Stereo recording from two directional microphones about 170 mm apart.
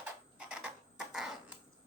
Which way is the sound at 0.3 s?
5° right (ahead or behind).